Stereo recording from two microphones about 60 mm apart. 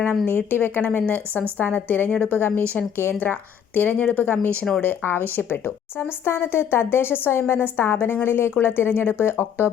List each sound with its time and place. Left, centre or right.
0.3 s speech: left
2.0 s a woman's voice: centre
2.3 s speech: left